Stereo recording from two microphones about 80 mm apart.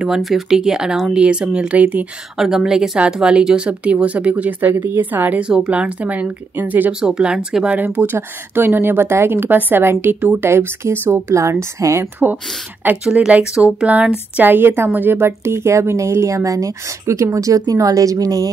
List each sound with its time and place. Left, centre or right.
0.0 s speech: centre
2.3 s speech: centre; by 6.9 s right
6.9 s speech: centre
7.8 s a woman's voice: right
13.0 s a woman's voice: centre; by 18.5 s right